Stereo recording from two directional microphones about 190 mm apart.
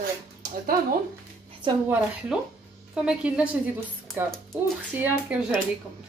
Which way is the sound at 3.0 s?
5° right (ahead or behind).